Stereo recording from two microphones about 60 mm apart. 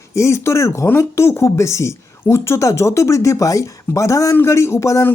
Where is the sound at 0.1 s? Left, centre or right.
Left.